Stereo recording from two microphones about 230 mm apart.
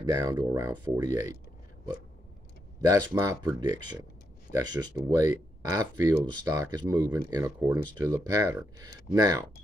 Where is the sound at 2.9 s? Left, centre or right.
Centre.